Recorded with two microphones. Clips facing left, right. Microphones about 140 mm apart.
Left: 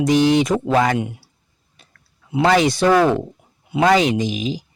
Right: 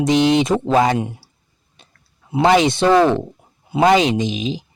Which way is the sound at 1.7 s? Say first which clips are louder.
Right 2 dB; 25° right (ahead or behind).